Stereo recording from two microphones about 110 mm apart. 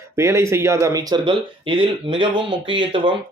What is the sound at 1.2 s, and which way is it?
Speech, 50° right (ahead or behind).